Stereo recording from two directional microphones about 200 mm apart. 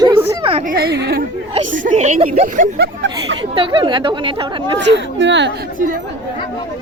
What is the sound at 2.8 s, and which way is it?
Speech, 65° right (ahead or behind).